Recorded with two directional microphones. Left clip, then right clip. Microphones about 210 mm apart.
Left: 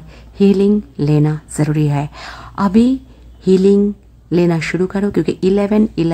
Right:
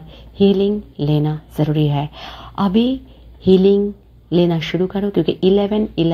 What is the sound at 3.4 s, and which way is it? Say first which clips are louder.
Speech: left 1 dB; 40° left (ahead or behind).